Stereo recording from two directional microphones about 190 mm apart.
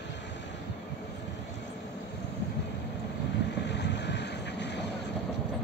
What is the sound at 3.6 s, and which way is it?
Vehicle, 65° left (ahead or behind).